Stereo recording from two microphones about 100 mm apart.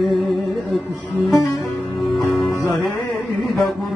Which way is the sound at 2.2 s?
30° left (ahead or behind).